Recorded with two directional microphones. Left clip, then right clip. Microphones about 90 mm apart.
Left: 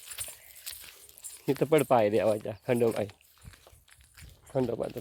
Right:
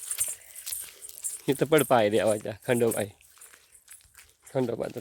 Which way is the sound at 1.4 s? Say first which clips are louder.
Right 2 dB; 35° right (ahead or behind).